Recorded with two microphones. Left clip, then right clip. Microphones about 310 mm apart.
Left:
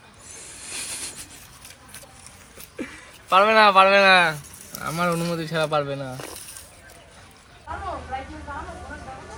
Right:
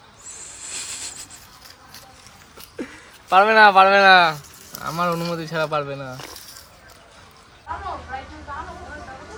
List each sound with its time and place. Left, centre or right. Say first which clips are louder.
2.7 s speech: right 1 dB; right
4.8 s speech: right 1 dB; centre